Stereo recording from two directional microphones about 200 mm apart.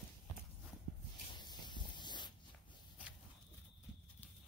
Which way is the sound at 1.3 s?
20° left (ahead or behind).